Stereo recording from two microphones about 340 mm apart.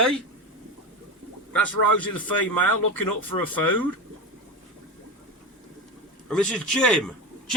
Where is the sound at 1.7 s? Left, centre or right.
Left.